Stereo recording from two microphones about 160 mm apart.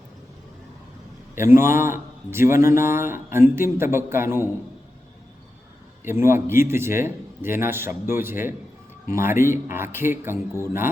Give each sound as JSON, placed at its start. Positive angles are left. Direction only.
{"t": 1.4, "sound": "a man's voice", "side_deg": -15}
{"t": 6.1, "sound": "a man's voice", "side_deg": -15}